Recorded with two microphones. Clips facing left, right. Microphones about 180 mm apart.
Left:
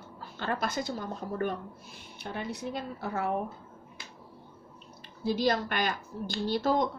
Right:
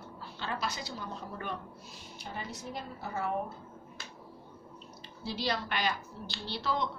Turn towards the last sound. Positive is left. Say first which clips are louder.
# left 7 dB
turn(degrees=45)  # may be behind; listen again after turning